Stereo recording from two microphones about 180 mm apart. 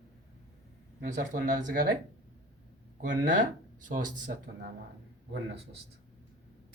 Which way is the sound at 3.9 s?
45° right (ahead or behind).